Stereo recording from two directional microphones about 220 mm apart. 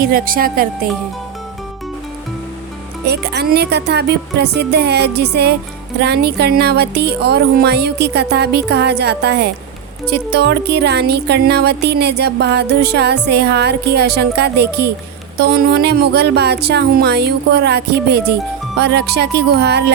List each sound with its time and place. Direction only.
0.0 s speech: 40° right (ahead or behind)
3.1 s music: 45° right (ahead or behind)